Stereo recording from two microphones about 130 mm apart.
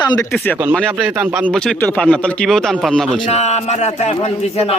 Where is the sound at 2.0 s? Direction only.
5° left (ahead or behind).